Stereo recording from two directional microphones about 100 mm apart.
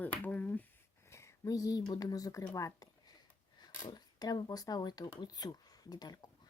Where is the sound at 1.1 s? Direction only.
30° left (ahead or behind).